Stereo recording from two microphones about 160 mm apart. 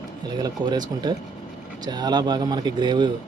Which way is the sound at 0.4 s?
25° right (ahead or behind).